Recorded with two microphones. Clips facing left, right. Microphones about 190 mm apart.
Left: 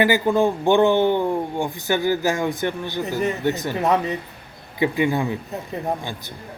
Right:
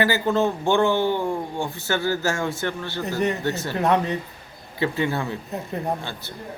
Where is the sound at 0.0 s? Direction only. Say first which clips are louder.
Left 3 dB; 15° left (ahead or behind).